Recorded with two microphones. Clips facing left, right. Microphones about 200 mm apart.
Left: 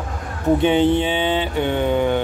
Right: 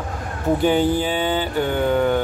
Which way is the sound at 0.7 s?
25° left (ahead or behind).